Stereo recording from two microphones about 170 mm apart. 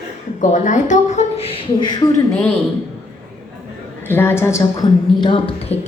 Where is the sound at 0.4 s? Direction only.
45° left (ahead or behind); by 2.2 s 25° left (ahead or behind).